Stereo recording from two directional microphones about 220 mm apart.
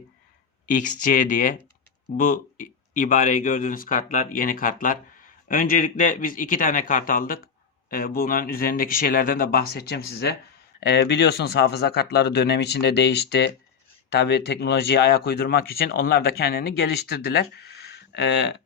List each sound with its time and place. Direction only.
0.7 s a man's voice: 35° left (ahead or behind); by 18.5 s 55° left (ahead or behind)